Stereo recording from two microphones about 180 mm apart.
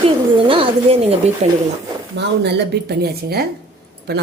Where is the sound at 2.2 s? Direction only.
70° right (ahead or behind).